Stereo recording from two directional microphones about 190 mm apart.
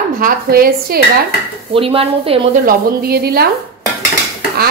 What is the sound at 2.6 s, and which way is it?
Speech, 55° right (ahead or behind).